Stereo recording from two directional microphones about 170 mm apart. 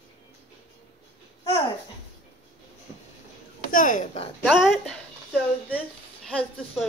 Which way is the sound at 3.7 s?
50° left (ahead or behind).